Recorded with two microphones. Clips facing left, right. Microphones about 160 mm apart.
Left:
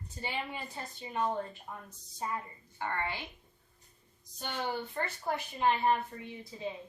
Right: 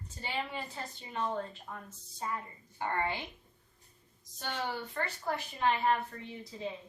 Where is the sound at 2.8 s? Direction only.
20° right (ahead or behind).